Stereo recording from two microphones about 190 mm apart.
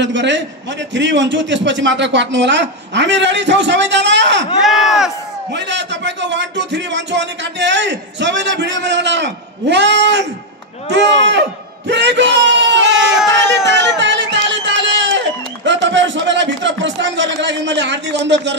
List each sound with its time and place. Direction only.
0.0 s a man's voice: 70° right (ahead or behind)
4.6 s speech: centre (ahead or behind)
5.5 s a man's voice: 65° right (ahead or behind)
13.3 s a sound: 70° right (ahead or behind)
13.7 s run: 70° right (ahead or behind)